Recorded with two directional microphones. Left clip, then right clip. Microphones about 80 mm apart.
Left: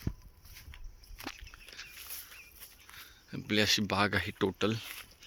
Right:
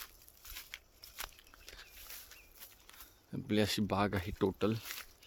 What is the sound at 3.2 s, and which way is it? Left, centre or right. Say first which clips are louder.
Speech: left 5 dB; right.